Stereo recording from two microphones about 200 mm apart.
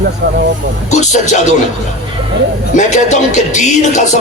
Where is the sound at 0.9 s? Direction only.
35° left (ahead or behind).